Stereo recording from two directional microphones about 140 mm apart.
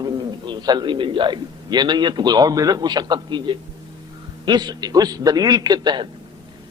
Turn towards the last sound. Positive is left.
turn(degrees=-30)  # may be behind; listen again after turning